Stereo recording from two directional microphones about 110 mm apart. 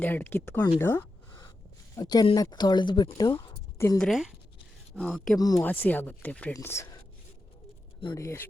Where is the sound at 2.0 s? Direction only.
40° left (ahead or behind).